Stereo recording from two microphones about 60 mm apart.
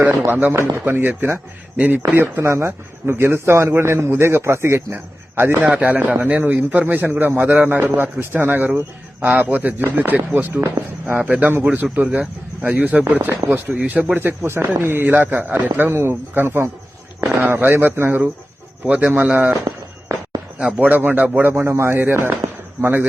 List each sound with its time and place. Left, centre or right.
0.0 s a man's voice: right
0.5 s speech: right
0.9 s a man's voice: right
1.7 s speech: right
2.1 s speech: right
5.5 s a man's voice: right
10.5 s speech: right
11.2 s a man's voice: right
19.1 s speech: right
19.6 s a sound: right
20.7 s speech: right
21.4 s a man's voice: right